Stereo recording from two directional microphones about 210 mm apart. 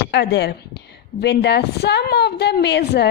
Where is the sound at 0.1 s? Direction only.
55° left (ahead or behind).